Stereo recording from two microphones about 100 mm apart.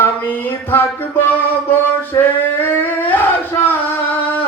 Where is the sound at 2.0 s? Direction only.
20° left (ahead or behind).